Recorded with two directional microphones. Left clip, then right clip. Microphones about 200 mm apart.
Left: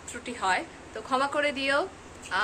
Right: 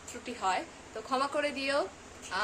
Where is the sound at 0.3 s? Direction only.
5° right (ahead or behind).